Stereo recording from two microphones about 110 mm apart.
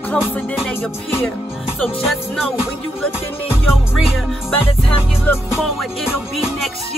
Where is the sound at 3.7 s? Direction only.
Centre (ahead or behind).